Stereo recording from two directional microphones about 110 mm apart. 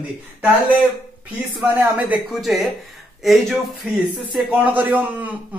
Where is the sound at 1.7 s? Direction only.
15° right (ahead or behind).